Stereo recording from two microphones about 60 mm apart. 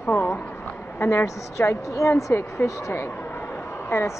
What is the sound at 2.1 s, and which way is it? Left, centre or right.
A woman's voice, left.